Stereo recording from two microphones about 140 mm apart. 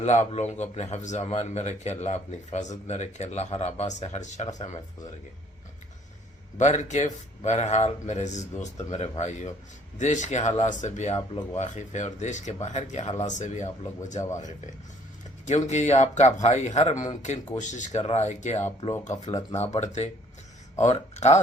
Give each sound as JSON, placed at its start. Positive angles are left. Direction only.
{"t": 0.0, "sound": "speech", "side_deg": 55}
{"t": 6.6, "sound": "speech", "side_deg": 55}
{"t": 15.4, "sound": "speech", "side_deg": 55}
{"t": 19.3, "sound": "speech", "side_deg": 25}
{"t": 19.5, "sound": "speech", "side_deg": 55}